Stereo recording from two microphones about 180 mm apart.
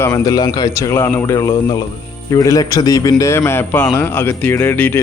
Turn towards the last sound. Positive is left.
turn(degrees=10)  # may be behind; listen again after turning